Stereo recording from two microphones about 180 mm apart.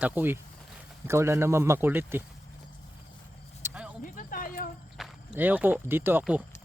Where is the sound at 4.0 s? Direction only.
50° left (ahead or behind).